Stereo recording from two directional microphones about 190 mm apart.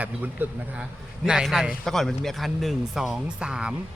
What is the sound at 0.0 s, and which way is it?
A man's voice, 10° right (ahead or behind).